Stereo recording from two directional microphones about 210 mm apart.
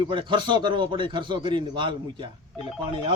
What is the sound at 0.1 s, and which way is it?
A man's voice, 20° right (ahead or behind).